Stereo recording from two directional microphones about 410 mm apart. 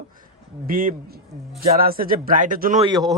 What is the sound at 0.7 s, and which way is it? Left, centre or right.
A man's voice, centre.